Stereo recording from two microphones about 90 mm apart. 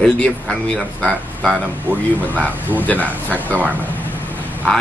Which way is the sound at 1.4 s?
15° right (ahead or behind).